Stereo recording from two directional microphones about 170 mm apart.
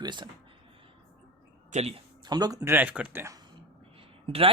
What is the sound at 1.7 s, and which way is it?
Speech, 35° right (ahead or behind).